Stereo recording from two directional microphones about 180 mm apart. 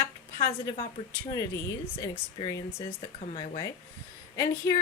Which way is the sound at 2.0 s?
20° left (ahead or behind).